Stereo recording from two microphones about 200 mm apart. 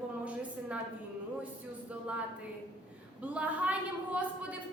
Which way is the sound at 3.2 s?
5° right (ahead or behind).